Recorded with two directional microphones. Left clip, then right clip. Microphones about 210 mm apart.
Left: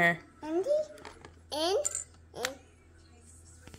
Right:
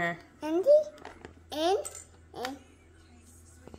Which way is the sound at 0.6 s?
20° right (ahead or behind).